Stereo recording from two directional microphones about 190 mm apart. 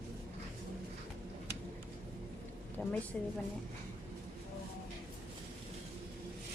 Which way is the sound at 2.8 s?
10° left (ahead or behind).